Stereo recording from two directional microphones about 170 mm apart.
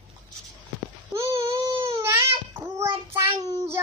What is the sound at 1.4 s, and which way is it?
Baby cry, 30° right (ahead or behind).